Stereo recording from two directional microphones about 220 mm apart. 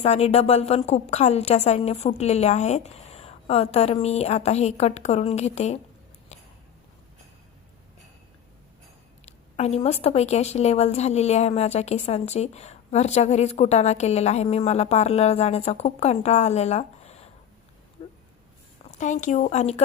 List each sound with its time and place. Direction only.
0.0 s speech: 30° left (ahead or behind)
9.2 s speech: 30° left (ahead or behind)
18.0 s a sound: 25° left (ahead or behind)
18.9 s a woman's voice: 35° left (ahead or behind)